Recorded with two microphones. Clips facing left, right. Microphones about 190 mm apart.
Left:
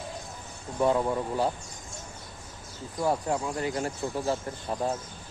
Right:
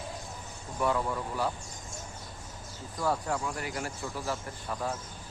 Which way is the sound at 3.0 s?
20° left (ahead or behind).